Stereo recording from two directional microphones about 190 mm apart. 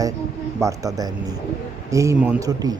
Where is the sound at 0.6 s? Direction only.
20° right (ahead or behind).